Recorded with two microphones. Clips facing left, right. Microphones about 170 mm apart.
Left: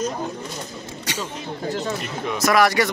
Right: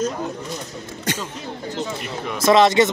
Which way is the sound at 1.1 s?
50° right (ahead or behind).